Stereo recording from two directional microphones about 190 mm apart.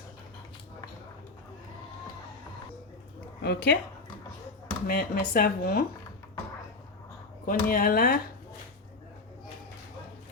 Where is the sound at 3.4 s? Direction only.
60° left (ahead or behind).